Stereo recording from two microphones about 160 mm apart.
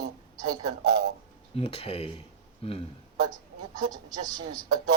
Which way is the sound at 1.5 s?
40° left (ahead or behind).